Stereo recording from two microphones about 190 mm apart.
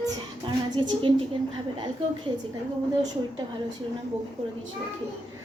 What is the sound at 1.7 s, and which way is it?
Speech, 25° right (ahead or behind).